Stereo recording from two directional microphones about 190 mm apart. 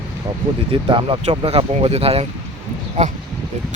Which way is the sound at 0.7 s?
25° right (ahead or behind).